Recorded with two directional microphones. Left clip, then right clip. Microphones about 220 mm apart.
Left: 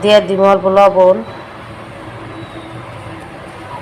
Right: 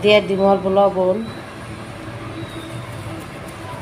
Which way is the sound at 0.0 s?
10° left (ahead or behind).